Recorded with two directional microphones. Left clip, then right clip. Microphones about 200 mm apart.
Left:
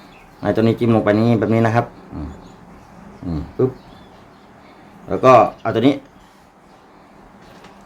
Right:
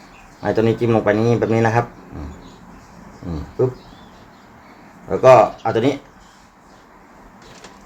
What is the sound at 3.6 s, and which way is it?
Speech, 25° left (ahead or behind).